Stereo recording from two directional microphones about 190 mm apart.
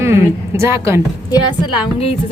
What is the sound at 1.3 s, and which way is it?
Speech, 20° left (ahead or behind).